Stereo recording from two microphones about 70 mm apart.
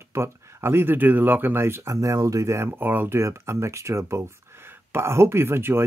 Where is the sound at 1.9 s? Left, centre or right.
Right.